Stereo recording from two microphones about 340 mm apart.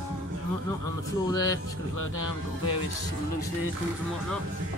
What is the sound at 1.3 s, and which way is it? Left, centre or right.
Speech, centre.